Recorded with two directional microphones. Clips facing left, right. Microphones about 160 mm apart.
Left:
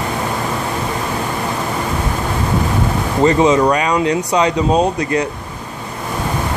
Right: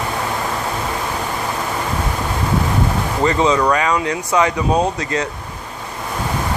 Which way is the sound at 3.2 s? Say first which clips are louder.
Left 4 dB; 20° left (ahead or behind).